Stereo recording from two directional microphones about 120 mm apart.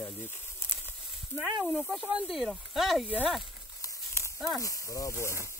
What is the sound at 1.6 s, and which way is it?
Speech, 5° right (ahead or behind).